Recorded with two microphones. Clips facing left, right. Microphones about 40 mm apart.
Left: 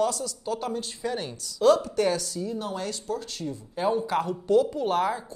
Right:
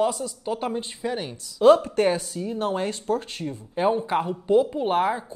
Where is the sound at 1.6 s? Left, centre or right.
Right.